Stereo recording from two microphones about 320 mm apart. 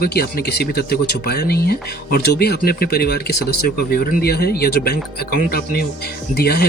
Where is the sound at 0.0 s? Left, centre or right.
Left.